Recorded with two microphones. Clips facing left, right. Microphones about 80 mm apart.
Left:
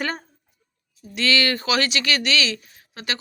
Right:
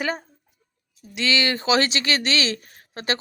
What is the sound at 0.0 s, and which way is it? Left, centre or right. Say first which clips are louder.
Speech: right 1 dB; centre.